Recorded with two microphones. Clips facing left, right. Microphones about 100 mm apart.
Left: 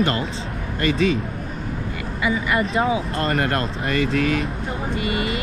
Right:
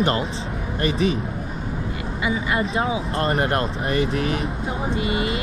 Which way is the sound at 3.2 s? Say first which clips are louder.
Right 1 dB; 25° right (ahead or behind).